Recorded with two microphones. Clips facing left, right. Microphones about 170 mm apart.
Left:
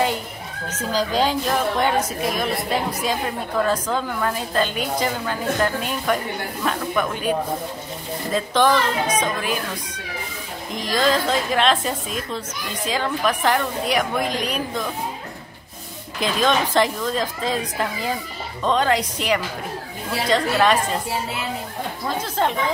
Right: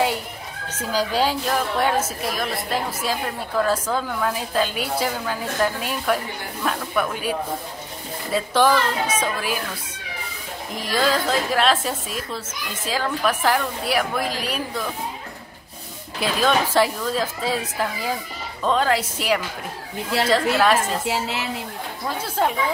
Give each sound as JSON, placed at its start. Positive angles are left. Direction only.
{"t": 0.7, "sound": "a woman's voice", "side_deg": -10}
{"t": 10.7, "sound": "a woman's voice", "side_deg": -5}
{"t": 16.2, "sound": "a woman's voice", "side_deg": -5}
{"t": 21.1, "sound": "a woman's voice", "side_deg": -80}
{"t": 22.4, "sound": "a woman's voice", "side_deg": -5}